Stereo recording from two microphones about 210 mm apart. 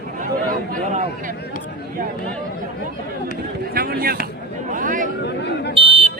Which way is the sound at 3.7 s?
45° right (ahead or behind).